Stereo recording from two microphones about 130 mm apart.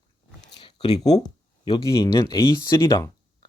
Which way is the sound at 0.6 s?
35° left (ahead or behind).